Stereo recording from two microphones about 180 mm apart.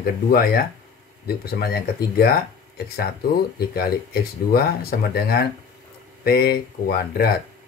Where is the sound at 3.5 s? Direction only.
60° left (ahead or behind).